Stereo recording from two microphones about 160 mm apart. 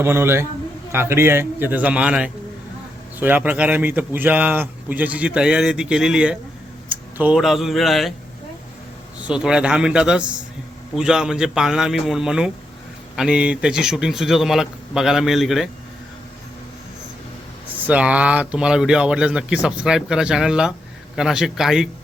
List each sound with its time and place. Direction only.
0.0 s a man's voice: 15° right (ahead or behind); by 8.1 s centre (ahead or behind)
9.2 s speech: 5° right (ahead or behind)
17.8 s speech: 10° right (ahead or behind)